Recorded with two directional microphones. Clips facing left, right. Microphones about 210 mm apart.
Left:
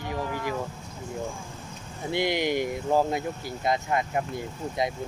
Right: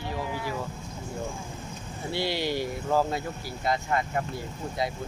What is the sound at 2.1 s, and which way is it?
Speech, 20° left (ahead or behind).